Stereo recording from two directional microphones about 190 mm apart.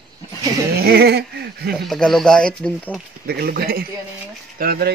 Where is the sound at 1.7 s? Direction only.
Centre (ahead or behind).